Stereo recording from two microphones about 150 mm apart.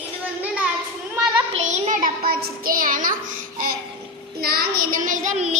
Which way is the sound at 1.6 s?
55° right (ahead or behind).